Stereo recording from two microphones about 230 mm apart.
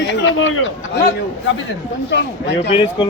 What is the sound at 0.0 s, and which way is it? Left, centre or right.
Speech, left.